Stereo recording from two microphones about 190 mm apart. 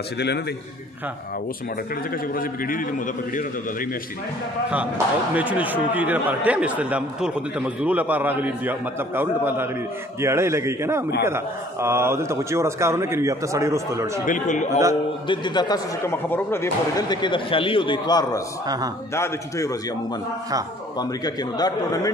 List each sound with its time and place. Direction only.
2.3 s a man's voice: 50° left (ahead or behind)
4.6 s speech: 10° right (ahead or behind)
14.2 s a man's voice: 40° left (ahead or behind)
15.2 s a man's voice: 25° left (ahead or behind)
21.0 s speech: 20° left (ahead or behind)